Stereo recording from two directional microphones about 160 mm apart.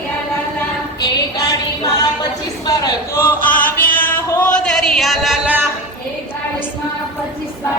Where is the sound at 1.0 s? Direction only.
25° left (ahead or behind).